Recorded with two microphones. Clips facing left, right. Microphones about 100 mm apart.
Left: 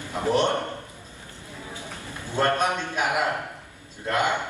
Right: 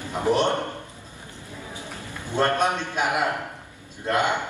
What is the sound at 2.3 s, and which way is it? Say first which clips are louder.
A man's voice: right 1 dB; 20° right (ahead or behind).